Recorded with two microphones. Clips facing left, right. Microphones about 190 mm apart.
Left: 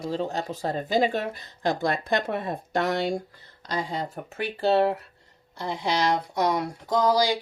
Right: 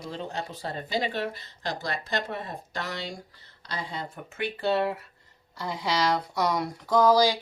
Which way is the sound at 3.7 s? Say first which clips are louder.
Left 6 dB; 45° left (ahead or behind).